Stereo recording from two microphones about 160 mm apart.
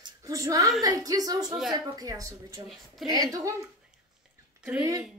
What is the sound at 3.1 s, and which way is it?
Speech, 25° right (ahead or behind).